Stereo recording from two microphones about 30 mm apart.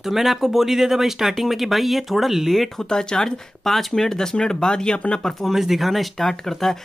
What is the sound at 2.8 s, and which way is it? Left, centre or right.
Speech, left.